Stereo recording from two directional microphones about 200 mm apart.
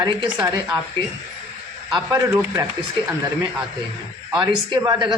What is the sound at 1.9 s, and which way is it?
Speech, 20° right (ahead or behind).